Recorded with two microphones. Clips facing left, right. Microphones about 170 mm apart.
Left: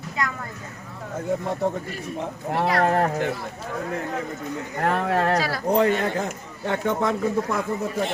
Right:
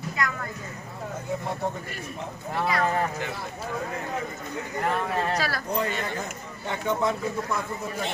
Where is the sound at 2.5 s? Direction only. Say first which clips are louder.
Left 4 dB; 65° left (ahead or behind).